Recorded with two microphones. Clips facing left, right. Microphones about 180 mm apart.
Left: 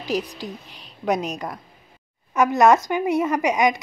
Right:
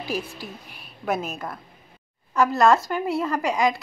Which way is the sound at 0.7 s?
20° left (ahead or behind).